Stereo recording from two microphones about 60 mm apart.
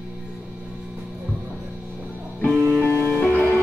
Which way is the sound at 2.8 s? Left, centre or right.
Left.